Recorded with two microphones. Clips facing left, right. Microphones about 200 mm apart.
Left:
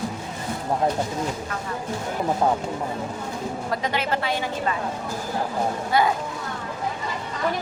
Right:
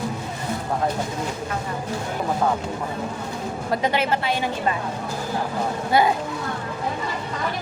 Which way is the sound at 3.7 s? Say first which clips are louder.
Right 5 dB; 25° right (ahead or behind).